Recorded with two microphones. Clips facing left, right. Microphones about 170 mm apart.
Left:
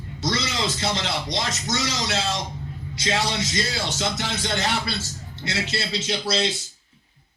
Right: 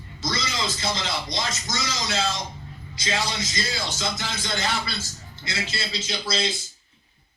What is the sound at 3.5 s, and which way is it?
Speech, 70° left (ahead or behind).